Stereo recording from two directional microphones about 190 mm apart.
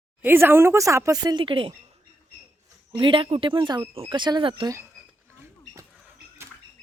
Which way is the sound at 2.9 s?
25° right (ahead or behind).